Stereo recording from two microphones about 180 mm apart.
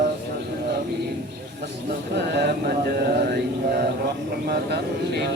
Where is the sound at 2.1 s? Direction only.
70° right (ahead or behind).